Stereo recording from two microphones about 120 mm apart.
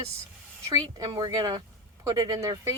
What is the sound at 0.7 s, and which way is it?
Speech, 35° right (ahead or behind).